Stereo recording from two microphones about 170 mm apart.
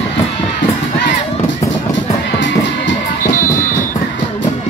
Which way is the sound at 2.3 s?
90° left.